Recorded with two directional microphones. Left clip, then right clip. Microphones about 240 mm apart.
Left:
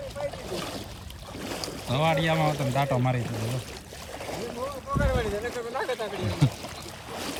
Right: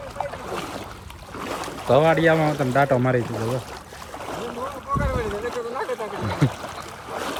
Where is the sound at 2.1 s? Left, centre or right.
Centre.